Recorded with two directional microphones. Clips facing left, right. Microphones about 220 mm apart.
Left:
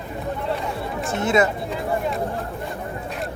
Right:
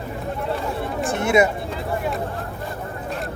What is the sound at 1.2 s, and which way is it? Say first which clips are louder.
Speech: right 2 dB; 15° right (ahead or behind).